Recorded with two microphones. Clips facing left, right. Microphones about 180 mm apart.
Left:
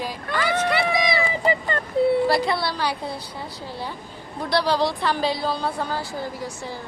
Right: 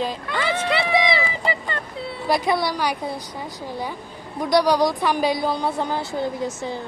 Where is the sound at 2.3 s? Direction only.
20° right (ahead or behind).